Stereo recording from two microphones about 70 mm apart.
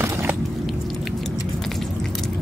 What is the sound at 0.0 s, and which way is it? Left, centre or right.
Biting, right.